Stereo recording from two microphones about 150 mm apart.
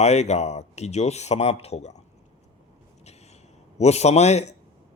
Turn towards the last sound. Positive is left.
turn(degrees=45)  # may be behind; listen again after turning